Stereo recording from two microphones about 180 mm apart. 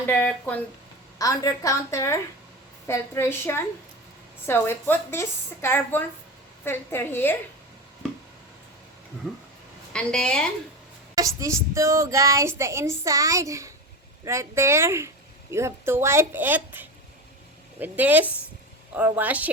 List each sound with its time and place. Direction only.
0.1 s a woman's voice: 10° left (ahead or behind)
1.2 s a woman's voice: 20° left (ahead or behind)
9.2 s speech: 5° right (ahead or behind)
9.9 s a woman's voice: 5° left (ahead or behind)
11.3 s speech: 15° right (ahead or behind)